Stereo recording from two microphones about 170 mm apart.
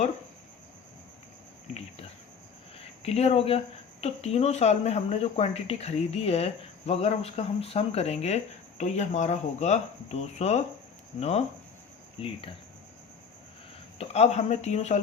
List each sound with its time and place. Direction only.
2.7 s speech: 40° left (ahead or behind)
14.0 s speech: 40° left (ahead or behind)